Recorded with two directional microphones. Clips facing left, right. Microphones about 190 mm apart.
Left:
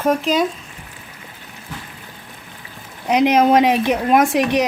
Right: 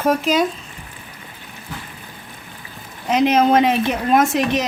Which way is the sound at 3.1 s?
15° left (ahead or behind).